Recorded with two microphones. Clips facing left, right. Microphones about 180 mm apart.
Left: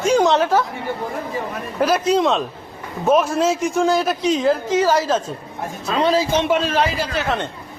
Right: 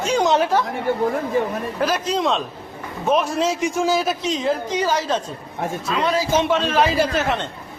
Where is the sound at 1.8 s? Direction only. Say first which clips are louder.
Left 5 dB; 5° left (ahead or behind).